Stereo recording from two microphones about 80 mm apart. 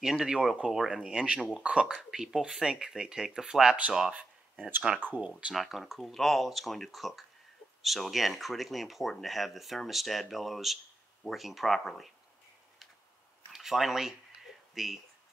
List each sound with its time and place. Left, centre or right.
0.0 s speech: centre
5.4 s speech: centre
13.5 s speech: centre